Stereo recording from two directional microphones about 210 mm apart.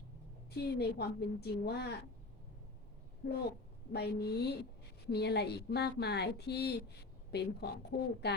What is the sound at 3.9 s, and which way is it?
Speech, 50° left (ahead or behind).